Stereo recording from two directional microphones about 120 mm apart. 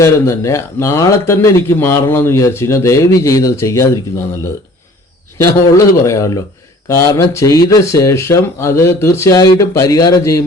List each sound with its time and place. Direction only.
0.0 s speech: 25° left (ahead or behind)
5.7 s speech: 25° left (ahead or behind)